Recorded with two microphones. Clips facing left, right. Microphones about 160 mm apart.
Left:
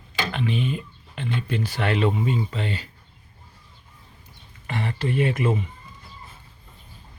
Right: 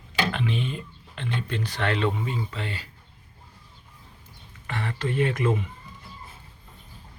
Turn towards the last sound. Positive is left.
turn(degrees=10)  # may be behind; listen again after turning